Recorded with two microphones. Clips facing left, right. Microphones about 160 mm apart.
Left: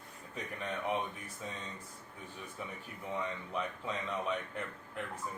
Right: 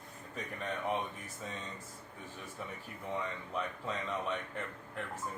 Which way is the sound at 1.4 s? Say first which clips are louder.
Even; centre (ahead or behind).